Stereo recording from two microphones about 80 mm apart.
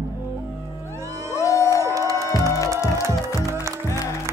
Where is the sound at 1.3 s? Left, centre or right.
Left.